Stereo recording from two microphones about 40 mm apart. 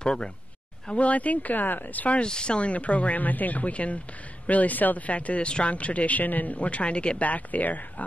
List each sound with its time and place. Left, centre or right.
0.0 s speech: left
0.8 s speech: left
2.2 s speech: left